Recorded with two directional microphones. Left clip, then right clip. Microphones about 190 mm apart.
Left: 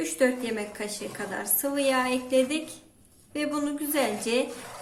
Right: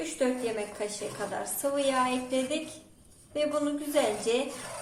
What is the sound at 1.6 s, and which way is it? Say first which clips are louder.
A woman's voice: left 2 dB; 55° left (ahead or behind).